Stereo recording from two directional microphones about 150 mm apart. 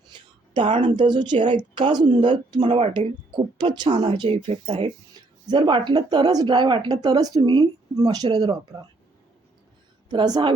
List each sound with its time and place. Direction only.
0.8 s speech: 30° right (ahead or behind)
2.6 s speech: 40° right (ahead or behind)
10.1 s speech: 25° right (ahead or behind)